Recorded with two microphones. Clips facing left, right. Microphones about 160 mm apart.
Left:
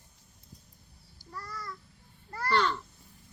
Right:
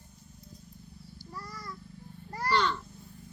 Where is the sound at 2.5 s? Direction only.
Centre (ahead or behind).